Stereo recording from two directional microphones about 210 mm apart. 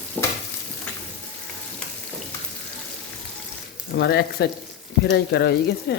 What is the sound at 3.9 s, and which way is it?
Speech, 50° left (ahead or behind).